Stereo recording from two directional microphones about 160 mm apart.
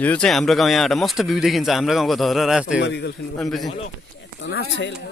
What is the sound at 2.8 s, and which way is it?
Speech, 90° left.